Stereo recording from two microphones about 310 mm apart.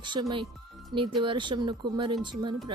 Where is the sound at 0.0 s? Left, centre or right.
Centre.